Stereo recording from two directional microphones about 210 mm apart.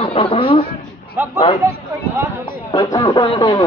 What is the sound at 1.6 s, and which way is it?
Speech, 15° right (ahead or behind).